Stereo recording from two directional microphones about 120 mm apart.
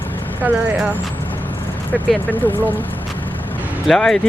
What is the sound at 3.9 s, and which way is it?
Speech, centre (ahead or behind).